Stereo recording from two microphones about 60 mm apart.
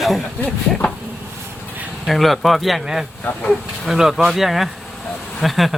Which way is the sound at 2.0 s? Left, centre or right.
Centre.